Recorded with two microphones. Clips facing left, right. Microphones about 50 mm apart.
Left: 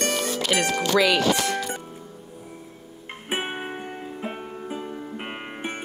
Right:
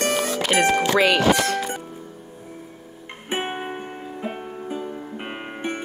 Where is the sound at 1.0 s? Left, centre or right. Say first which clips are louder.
Right 3 dB; right.